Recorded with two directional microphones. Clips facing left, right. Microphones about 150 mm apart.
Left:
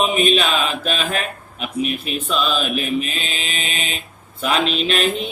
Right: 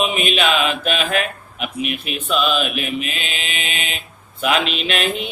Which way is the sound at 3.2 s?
35° left (ahead or behind).